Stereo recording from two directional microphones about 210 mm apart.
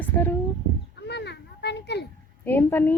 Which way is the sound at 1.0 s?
55° left (ahead or behind).